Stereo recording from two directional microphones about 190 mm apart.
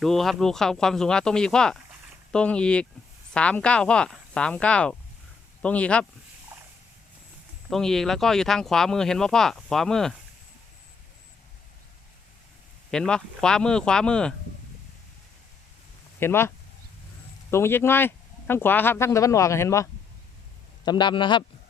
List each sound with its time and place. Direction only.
0.0 s speech: centre (ahead or behind)
7.7 s speech: centre (ahead or behind)
12.9 s speech: 5° left (ahead or behind)
16.2 s speech: 10° left (ahead or behind)
17.5 s a man's voice: 10° left (ahead or behind)